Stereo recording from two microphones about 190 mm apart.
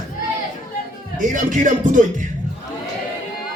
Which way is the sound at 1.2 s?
40° right (ahead or behind).